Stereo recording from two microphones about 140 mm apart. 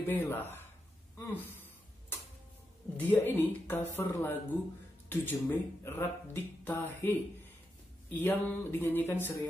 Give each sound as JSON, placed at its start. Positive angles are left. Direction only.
{"t": 0.0, "sound": "speech", "side_deg": 15}
{"t": 1.1, "sound": "a sound", "side_deg": 15}
{"t": 3.0, "sound": "speech", "side_deg": 15}